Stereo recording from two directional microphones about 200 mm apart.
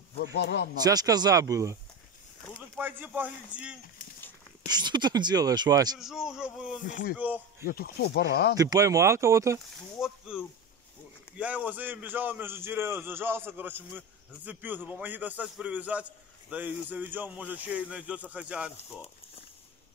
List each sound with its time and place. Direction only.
0.2 s speech: 60° left (ahead or behind)
0.7 s speech: 20° right (ahead or behind)
2.8 s a man's voice: 10° right (ahead or behind)
4.6 s speech: 20° right (ahead or behind)
5.9 s a man's voice: centre (ahead or behind)
6.8 s speech: 40° left (ahead or behind)
8.5 s a man's voice: 15° right (ahead or behind)
9.9 s a man's voice: 5° right (ahead or behind)